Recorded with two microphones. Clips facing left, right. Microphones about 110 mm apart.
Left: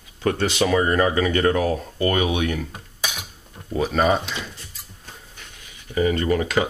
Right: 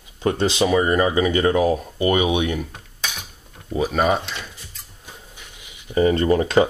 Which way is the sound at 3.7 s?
5° right (ahead or behind).